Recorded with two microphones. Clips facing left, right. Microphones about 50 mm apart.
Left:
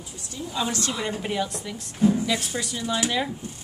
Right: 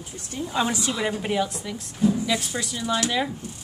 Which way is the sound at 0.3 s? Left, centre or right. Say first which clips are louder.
Right 4 dB; right.